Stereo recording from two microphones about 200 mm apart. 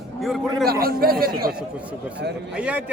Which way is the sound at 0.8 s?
50° right (ahead or behind).